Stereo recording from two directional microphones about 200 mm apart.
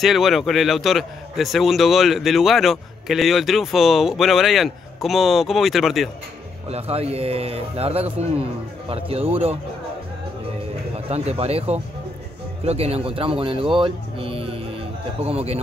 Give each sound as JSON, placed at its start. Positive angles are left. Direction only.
{"t": 0.0, "sound": "a man's voice", "side_deg": 0}
{"t": 6.7, "sound": "a man's voice", "side_deg": -30}
{"t": 11.1, "sound": "a man's voice", "side_deg": -30}